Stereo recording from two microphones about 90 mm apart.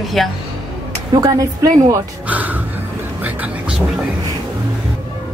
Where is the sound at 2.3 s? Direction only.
20° right (ahead or behind).